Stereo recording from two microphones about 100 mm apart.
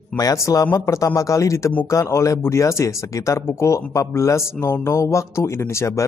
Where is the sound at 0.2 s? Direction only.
35° left (ahead or behind).